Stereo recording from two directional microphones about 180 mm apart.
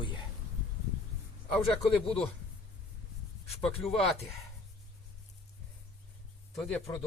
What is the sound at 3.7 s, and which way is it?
Speech, 30° left (ahead or behind).